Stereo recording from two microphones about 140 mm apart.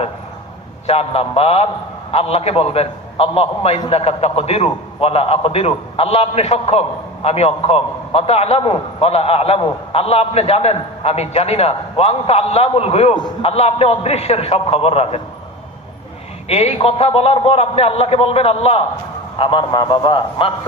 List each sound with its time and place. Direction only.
0.9 s a man's voice: 45° left (ahead or behind)
16.5 s a man's voice: 45° left (ahead or behind)